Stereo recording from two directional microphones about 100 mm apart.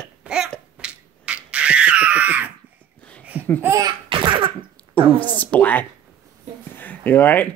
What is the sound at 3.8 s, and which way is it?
Laughter, 60° right (ahead or behind).